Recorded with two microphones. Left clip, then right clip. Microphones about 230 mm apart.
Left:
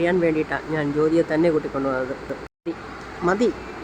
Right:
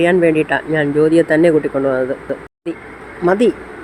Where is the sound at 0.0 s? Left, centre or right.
Centre.